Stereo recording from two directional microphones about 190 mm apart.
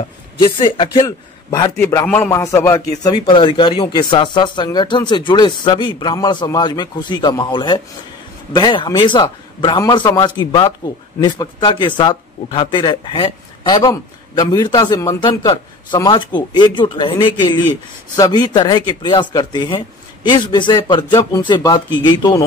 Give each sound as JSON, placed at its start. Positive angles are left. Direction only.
{"t": 0.4, "sound": "a man's voice", "side_deg": 25}